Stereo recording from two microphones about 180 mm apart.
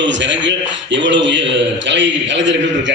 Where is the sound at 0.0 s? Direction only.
90° right.